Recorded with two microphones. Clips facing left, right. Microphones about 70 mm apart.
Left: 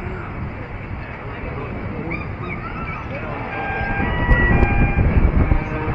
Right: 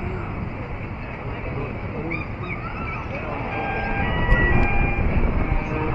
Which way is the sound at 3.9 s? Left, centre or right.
Left.